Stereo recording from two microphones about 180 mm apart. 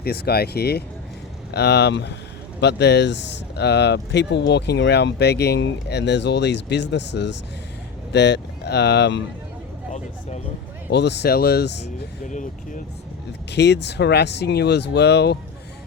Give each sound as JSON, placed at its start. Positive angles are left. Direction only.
{"t": 0.0, "sound": "speech", "side_deg": 60}
{"t": 10.9, "sound": "speech", "side_deg": 70}
{"t": 12.3, "sound": "speech", "side_deg": 45}
{"t": 13.5, "sound": "speech", "side_deg": 70}